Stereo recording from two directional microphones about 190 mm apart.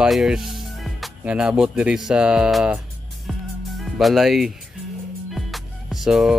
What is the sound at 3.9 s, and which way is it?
Speech, centre (ahead or behind).